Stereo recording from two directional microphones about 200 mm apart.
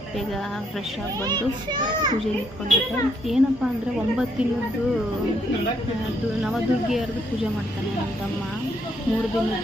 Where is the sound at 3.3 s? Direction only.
Centre (ahead or behind).